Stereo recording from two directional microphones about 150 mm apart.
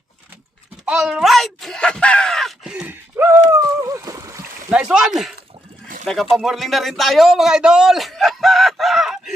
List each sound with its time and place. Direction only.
0.9 s groan: 5° right (ahead or behind)
3.5 s splash: 20° right (ahead or behind)
4.8 s a man's voice: 5° right (ahead or behind)